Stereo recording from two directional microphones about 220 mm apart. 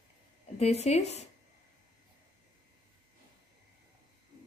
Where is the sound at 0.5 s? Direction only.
30° left (ahead or behind).